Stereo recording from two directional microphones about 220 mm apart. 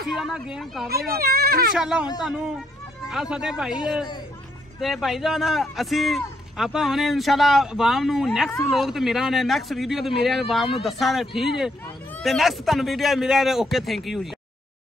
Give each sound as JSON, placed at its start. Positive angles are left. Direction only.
{"t": 0.1, "sound": "speech", "side_deg": 0}
{"t": 0.8, "sound": "speech", "side_deg": -45}
{"t": 1.8, "sound": "speech", "side_deg": -5}
{"t": 4.7, "sound": "speech", "side_deg": 0}